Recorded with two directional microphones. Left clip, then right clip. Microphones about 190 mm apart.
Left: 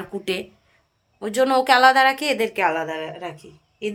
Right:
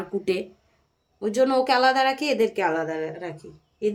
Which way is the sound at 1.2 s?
5° right (ahead or behind).